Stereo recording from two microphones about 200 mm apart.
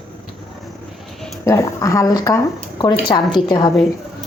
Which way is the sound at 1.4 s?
15° left (ahead or behind).